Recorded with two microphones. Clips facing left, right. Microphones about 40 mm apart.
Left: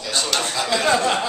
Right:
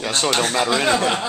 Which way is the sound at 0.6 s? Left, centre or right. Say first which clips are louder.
Even; centre.